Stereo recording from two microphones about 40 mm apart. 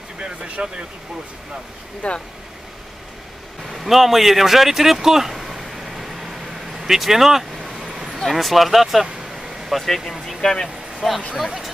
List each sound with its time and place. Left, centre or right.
0.2 s speech: right
2.0 s speech: left
3.7 s speech: centre
6.8 s vehicle: centre
8.3 s speech: centre
11.3 s speech: centre